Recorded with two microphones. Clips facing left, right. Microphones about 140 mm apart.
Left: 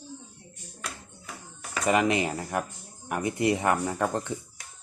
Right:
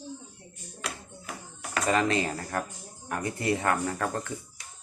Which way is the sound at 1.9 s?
15° left (ahead or behind).